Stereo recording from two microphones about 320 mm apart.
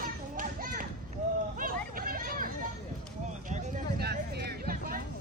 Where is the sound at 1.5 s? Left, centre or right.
Right.